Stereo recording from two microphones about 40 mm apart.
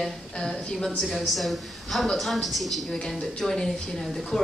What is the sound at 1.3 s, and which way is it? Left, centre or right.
A woman's voice, centre.